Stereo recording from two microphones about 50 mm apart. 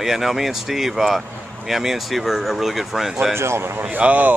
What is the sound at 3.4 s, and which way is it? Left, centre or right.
Speech, right.